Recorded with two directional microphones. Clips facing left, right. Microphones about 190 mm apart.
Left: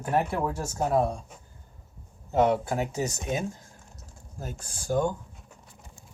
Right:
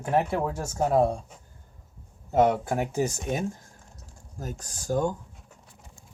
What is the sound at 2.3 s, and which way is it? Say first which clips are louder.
Speech: right 1 dB; 50° right (ahead or behind).